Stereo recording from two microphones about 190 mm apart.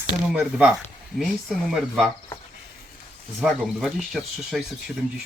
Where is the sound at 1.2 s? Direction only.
Centre (ahead or behind).